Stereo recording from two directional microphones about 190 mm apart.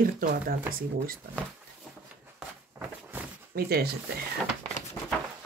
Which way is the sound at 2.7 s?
15° right (ahead or behind).